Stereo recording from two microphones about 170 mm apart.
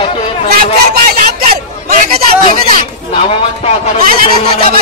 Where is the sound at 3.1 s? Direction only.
40° left (ahead or behind).